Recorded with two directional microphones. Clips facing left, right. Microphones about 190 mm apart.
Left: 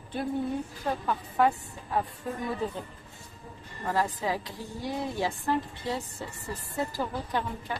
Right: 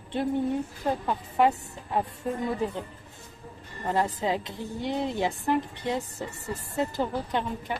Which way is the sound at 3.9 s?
25° right (ahead or behind).